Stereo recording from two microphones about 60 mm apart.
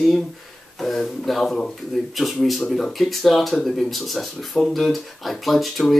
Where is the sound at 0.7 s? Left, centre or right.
Centre.